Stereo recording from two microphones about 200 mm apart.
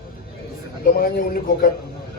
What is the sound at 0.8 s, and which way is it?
Speech, 45° left (ahead or behind).